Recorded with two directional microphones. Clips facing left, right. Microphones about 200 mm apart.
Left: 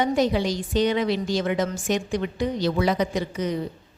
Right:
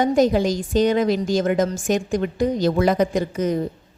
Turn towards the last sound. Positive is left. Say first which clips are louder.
# right 5 dB
turn(degrees=-45)  # may be behind; listen again after turning